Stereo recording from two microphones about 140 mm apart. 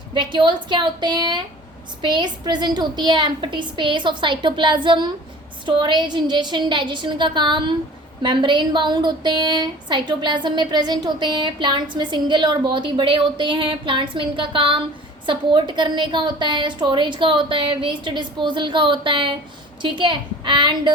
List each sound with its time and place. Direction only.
0.1 s a woman's voice: 35° right (ahead or behind)